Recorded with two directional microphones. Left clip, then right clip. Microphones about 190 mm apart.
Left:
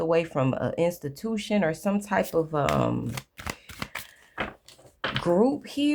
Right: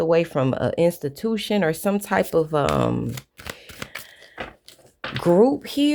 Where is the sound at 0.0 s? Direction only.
30° right (ahead or behind).